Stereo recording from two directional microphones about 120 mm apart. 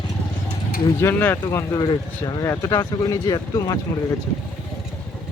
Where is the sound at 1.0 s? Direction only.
20° left (ahead or behind).